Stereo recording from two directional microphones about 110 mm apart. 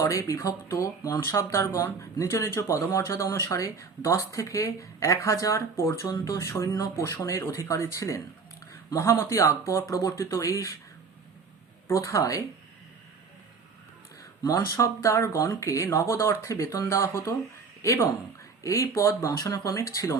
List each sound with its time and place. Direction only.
0.0 s speech: 30° left (ahead or behind)
11.9 s speech: 30° left (ahead or behind)
14.4 s speech: 30° left (ahead or behind)